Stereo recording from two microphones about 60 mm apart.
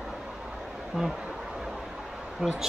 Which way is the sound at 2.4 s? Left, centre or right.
Centre.